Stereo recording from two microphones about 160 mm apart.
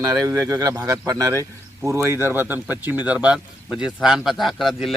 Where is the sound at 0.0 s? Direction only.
20° right (ahead or behind).